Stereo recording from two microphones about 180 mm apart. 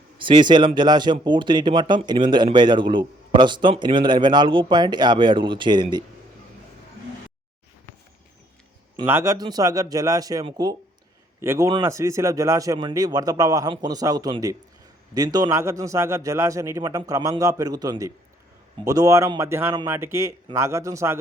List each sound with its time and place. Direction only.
0.2 s speech: 25° right (ahead or behind)
9.0 s a man's voice: 15° right (ahead or behind)